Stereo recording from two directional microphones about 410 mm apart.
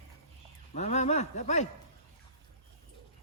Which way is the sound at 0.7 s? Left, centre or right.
Centre.